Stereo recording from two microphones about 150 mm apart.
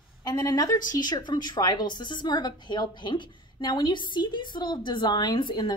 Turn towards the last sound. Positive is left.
turn(degrees=30)  # may be behind; listen again after turning